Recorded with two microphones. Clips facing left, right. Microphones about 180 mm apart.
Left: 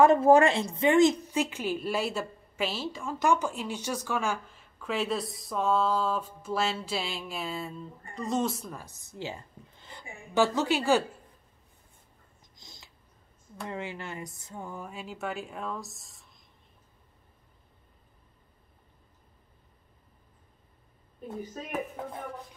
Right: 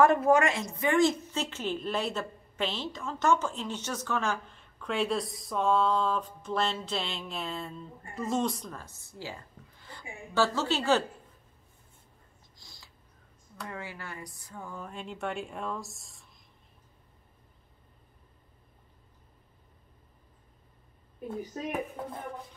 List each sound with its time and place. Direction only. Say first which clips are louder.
0.0 s a woman's voice: left 3 dB; 25° left (ahead or behind)
12.5 s a sound: left 3 dB; 20° left (ahead or behind)
13.6 s speech: left 4 dB; 25° left (ahead or behind)
14.9 s speech: right 3 dB; 5° left (ahead or behind)